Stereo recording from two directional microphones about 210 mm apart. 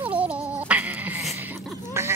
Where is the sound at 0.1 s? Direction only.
5° right (ahead or behind).